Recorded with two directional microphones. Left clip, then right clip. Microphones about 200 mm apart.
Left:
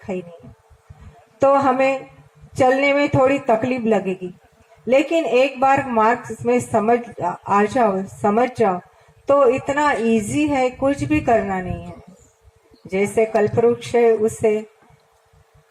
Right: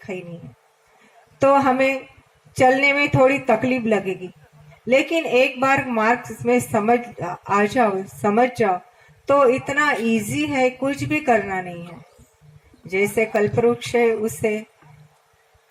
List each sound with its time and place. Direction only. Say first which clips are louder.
1.4 s speech: left 1 dB; 35° left (ahead or behind)
12.9 s speech: left 2 dB; 40° left (ahead or behind)